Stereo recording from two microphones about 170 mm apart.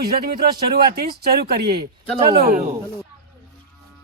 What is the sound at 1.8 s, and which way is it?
Speech, 30° right (ahead or behind).